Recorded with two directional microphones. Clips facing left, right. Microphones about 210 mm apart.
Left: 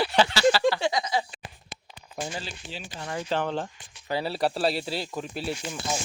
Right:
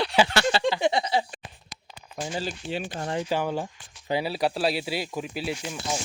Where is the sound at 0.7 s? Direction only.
20° right (ahead or behind).